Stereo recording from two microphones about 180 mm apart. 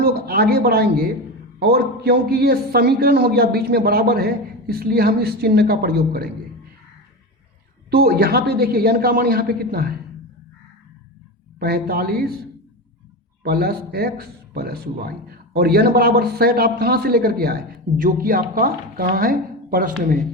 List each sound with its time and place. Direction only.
0.0 s speech: 60° right (ahead or behind)
7.9 s speech: 60° right (ahead or behind)
11.6 s speech: 60° right (ahead or behind)
13.4 s speech: 60° right (ahead or behind)